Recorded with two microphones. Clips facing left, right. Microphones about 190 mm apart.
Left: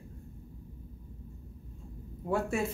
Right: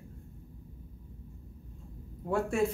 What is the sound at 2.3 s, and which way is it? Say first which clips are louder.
Speech: right 1 dB; 5° left (ahead or behind).